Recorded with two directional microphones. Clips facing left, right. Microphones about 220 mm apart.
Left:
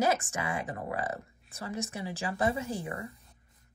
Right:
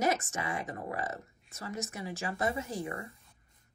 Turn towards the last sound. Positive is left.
turn(degrees=30)  # may be behind; listen again after turning